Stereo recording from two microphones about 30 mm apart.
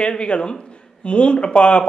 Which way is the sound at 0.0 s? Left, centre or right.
Left.